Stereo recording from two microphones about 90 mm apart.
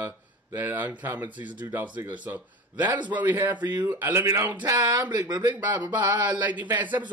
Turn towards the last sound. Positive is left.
turn(degrees=-20)  # may be behind; listen again after turning